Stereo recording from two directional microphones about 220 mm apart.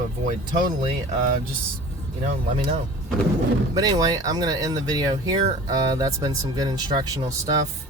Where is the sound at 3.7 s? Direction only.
15° right (ahead or behind).